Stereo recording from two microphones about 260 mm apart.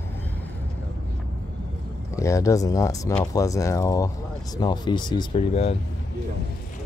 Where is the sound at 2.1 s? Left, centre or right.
Centre.